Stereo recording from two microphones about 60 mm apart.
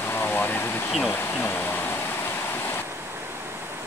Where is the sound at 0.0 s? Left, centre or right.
Left.